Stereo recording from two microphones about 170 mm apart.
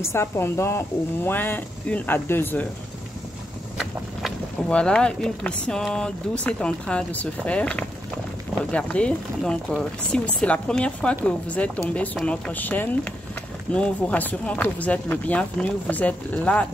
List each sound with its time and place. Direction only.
0.0 s speech: 15° left (ahead or behind)
3.7 s speech: centre (ahead or behind)